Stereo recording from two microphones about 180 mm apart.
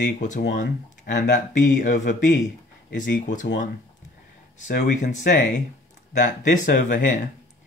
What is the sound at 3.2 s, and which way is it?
Speech, 45° left (ahead or behind).